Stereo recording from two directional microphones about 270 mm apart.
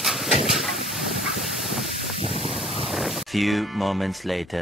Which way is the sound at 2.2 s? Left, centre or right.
Right.